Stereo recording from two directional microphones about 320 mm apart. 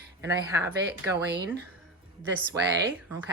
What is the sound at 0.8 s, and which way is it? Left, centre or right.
Speech, right.